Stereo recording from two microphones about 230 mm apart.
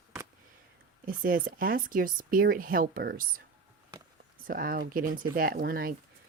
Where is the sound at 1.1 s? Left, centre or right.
Right.